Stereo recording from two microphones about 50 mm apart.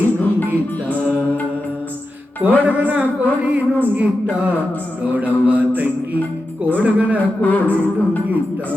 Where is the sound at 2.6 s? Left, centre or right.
Right.